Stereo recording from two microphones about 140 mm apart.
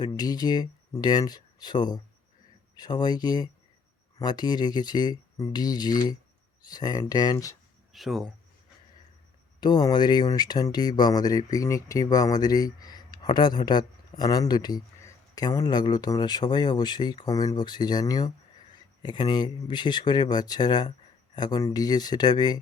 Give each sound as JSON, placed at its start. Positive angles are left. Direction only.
{"t": 0.0, "sound": "speech", "side_deg": 30}
{"t": 7.9, "sound": "speech", "side_deg": 0}
{"t": 9.6, "sound": "speech", "side_deg": 30}